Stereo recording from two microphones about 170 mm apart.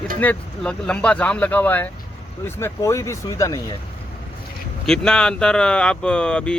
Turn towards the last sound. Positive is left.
turn(degrees=5)  # may be behind; listen again after turning